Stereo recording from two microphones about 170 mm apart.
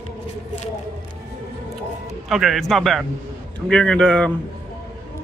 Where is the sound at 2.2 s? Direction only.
Centre (ahead or behind).